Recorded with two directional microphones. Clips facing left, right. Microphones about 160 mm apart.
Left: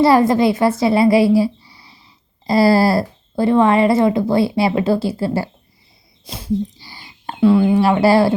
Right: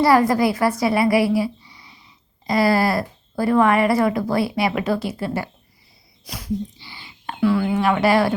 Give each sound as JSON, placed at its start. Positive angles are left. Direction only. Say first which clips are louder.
{"t": 0.0, "sound": "a woman's voice", "louder": "left 3 dB", "side_deg": 25}
{"t": 6.2, "sound": "a sound", "louder": "left 3 dB", "side_deg": 25}
{"t": 6.7, "sound": "whispering", "louder": "left 1 dB", "side_deg": 40}
{"t": 7.4, "sound": "speech", "louder": "left 6 dB", "side_deg": 25}